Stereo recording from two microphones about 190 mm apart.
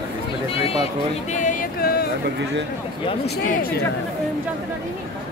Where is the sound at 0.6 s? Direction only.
30° left (ahead or behind).